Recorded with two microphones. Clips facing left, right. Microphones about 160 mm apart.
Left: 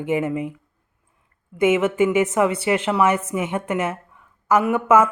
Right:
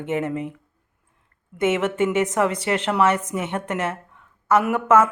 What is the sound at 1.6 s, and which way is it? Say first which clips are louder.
A woman's voice: left 3 dB; 10° left (ahead or behind).